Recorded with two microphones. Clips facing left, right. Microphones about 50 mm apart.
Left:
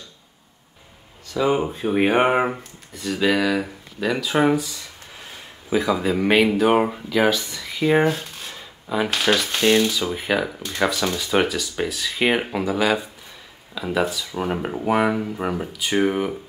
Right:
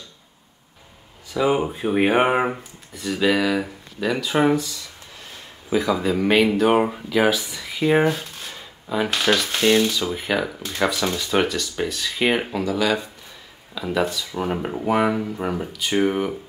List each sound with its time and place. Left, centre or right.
1.3 s speech: centre
12.6 s speech: centre
13.7 s speech: centre